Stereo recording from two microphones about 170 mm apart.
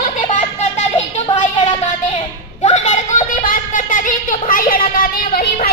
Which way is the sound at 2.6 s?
45° left (ahead or behind).